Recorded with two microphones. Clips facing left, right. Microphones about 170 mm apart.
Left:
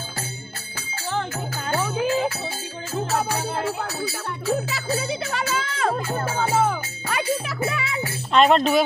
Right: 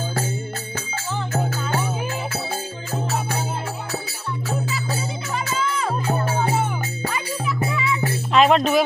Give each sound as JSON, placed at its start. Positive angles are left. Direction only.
{"t": 4.6, "sound": "music", "side_deg": 75}
{"t": 6.3, "sound": "music", "side_deg": 90}
{"t": 8.3, "sound": "music", "side_deg": 0}